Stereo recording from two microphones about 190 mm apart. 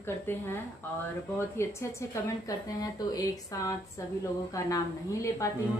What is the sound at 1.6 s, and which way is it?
A woman's voice, 15° left (ahead or behind).